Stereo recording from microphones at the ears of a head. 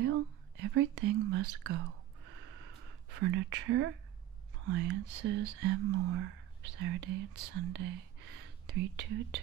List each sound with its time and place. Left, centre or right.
0.0 s whispering: right
4.6 s speech: right